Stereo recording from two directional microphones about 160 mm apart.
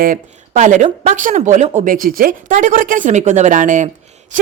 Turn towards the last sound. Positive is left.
turn(degrees=-50)  # may be behind; listen again after turning